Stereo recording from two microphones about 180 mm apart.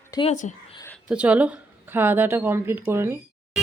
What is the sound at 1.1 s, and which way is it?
A woman's voice, 5° right (ahead or behind).